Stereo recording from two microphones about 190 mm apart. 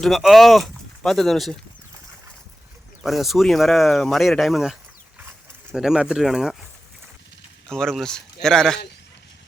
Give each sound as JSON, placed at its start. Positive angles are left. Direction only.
{"t": 0.0, "sound": "speech", "side_deg": 0}
{"t": 3.0, "sound": "speech", "side_deg": 0}
{"t": 7.7, "sound": "speech", "side_deg": 5}